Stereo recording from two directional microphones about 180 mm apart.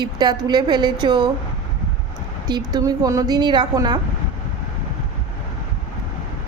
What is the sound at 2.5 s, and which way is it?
A woman's voice, 20° right (ahead or behind).